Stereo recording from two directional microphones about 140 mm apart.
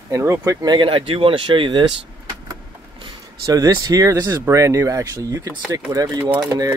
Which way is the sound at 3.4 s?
25° right (ahead or behind).